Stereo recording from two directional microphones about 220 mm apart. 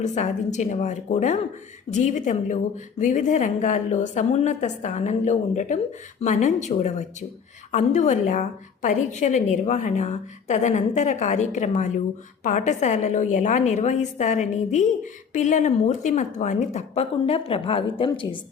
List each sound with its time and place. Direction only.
0.0 s a woman's voice: 30° left (ahead or behind)